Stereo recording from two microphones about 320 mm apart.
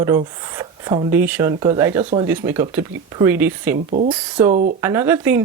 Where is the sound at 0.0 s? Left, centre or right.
Centre.